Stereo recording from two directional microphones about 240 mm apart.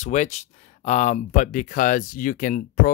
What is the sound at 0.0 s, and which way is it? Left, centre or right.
Speech, left.